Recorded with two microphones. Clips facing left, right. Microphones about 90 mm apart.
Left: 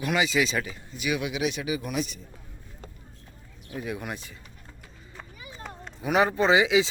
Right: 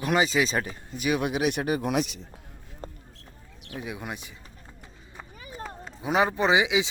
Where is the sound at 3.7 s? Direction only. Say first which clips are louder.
Left 2 dB; 20° right (ahead or behind).